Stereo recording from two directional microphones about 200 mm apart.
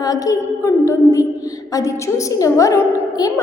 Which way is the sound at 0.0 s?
15° left (ahead or behind).